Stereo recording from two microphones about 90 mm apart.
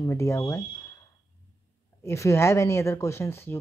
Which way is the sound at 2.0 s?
30° left (ahead or behind).